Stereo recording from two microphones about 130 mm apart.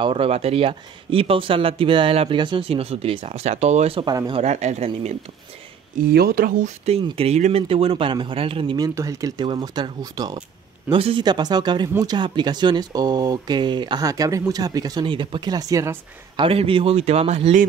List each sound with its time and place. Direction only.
0.0 s speech: 45° right (ahead or behind)
4.0 s speech: 35° right (ahead or behind)
4.4 s speech: 60° right (ahead or behind)
5.9 s speech: 80° right
6.9 s speech: 50° right (ahead or behind)
8.7 s speech: 25° right (ahead or behind)
10.9 s speech: 45° right (ahead or behind); by 16.0 s 25° right (ahead or behind)
16.3 s speech: 45° right (ahead or behind)